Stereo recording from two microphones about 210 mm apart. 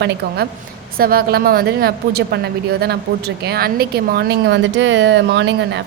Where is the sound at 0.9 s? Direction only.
45° right (ahead or behind).